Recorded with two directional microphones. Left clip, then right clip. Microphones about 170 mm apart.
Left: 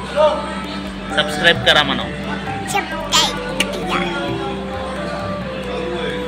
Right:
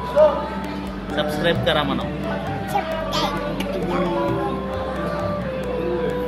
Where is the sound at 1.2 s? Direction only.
5° right (ahead or behind).